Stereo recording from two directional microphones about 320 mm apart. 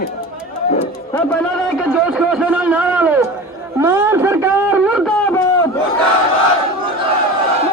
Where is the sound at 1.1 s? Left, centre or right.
Centre.